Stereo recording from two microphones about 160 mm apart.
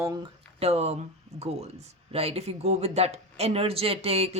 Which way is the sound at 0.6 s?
40° right (ahead or behind).